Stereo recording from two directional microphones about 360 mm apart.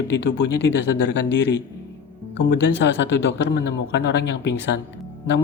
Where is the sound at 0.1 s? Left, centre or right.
Left.